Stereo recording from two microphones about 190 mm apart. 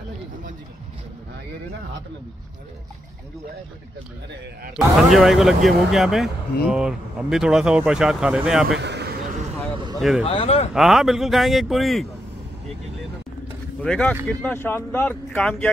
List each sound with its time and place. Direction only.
4.7 s speech: centre (ahead or behind)
8.7 s a sound: 65° right (ahead or behind)
9.9 s speech: centre (ahead or behind)
10.2 s speech: 30° left (ahead or behind)
10.7 s speech: centre (ahead or behind)
13.8 s speech: 5° left (ahead or behind)